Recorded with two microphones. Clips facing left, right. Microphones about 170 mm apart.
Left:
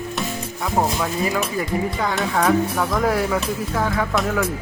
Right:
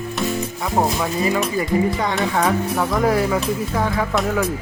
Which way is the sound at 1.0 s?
Centre (ahead or behind).